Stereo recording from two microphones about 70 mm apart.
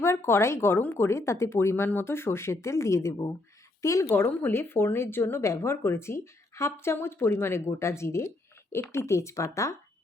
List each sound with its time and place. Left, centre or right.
0.0 s a woman's voice: left
4.1 s a woman's voice: left